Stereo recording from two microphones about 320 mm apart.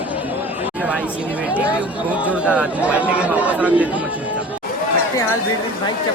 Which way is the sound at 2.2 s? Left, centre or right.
Centre.